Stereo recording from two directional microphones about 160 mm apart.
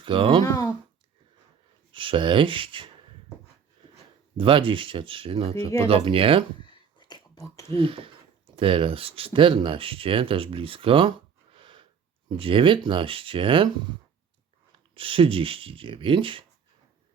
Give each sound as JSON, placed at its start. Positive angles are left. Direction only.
{"t": 0.0, "sound": "speech", "side_deg": -30}
{"t": 0.4, "sound": "speech", "side_deg": 15}
{"t": 1.9, "sound": "speech", "side_deg": -30}
{"t": 3.9, "sound": "speech", "side_deg": -30}
{"t": 6.7, "sound": "a sound", "side_deg": 30}
{"t": 7.7, "sound": "speech", "side_deg": -35}
{"t": 11.5, "sound": "a sound", "side_deg": -30}
{"t": 12.4, "sound": "speech", "side_deg": -35}
{"t": 14.9, "sound": "speech", "side_deg": -35}